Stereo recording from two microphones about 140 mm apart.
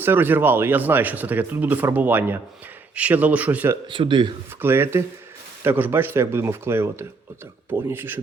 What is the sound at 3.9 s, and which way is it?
Speech, 35° right (ahead or behind).